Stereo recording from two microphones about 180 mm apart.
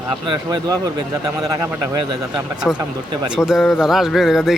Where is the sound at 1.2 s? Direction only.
20° right (ahead or behind).